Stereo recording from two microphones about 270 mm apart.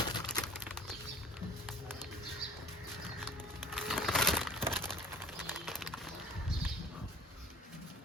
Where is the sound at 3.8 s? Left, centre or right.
Centre.